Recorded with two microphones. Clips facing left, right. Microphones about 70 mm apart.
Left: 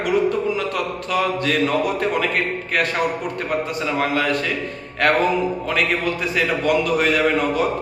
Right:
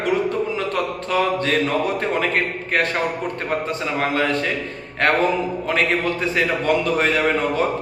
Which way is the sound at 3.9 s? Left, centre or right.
Right.